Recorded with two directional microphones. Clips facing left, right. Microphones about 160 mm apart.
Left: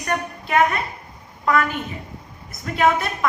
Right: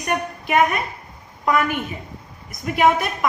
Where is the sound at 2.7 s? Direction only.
15° right (ahead or behind).